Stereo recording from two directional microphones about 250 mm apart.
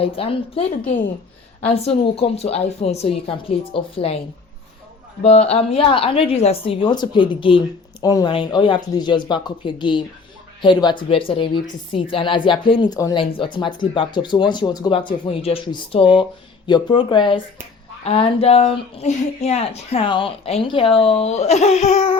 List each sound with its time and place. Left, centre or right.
0.0 s speech: left
5.2 s speech: left